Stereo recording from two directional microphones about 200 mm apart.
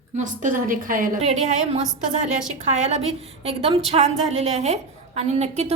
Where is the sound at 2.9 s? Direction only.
30° right (ahead or behind).